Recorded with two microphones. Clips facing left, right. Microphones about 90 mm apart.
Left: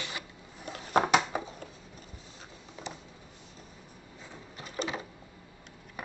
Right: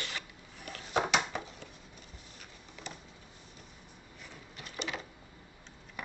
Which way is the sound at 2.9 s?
20° left (ahead or behind).